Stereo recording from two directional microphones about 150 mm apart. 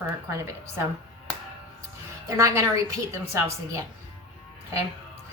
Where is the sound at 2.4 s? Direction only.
20° right (ahead or behind).